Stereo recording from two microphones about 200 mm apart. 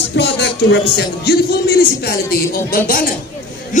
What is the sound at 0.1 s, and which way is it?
Speech, 60° left (ahead or behind).